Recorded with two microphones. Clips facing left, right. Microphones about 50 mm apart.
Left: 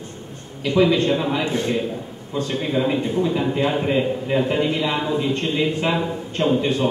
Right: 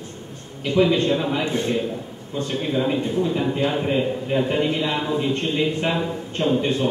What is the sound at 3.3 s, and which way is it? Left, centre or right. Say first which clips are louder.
A man's voice: left 1 dB; centre.